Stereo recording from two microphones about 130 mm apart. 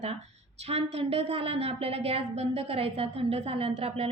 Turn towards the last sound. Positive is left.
turn(degrees=-50)  # may be behind; listen again after turning